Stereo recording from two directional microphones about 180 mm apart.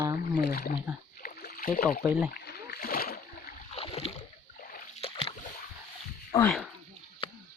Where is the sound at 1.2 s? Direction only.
50° left (ahead or behind).